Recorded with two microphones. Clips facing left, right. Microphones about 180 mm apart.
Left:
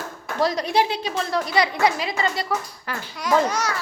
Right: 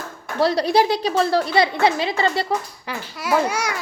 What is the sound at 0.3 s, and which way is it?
A woman's voice, 30° right (ahead or behind).